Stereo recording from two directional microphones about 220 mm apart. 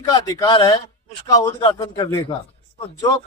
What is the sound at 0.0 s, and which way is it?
Speech, 15° left (ahead or behind).